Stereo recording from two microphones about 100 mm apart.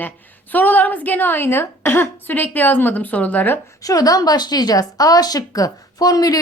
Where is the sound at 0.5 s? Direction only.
15° left (ahead or behind).